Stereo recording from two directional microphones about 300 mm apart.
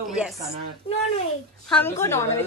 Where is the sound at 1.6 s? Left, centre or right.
Centre.